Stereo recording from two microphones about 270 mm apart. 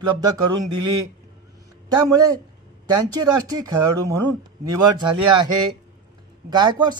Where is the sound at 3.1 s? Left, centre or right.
Centre.